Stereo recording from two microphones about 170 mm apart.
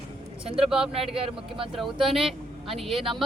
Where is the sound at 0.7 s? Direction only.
5° right (ahead or behind).